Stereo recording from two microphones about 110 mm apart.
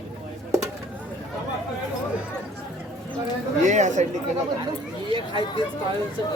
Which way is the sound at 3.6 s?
90° right.